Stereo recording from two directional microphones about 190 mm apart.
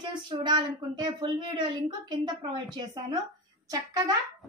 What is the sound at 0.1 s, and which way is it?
A woman's voice, 25° right (ahead or behind).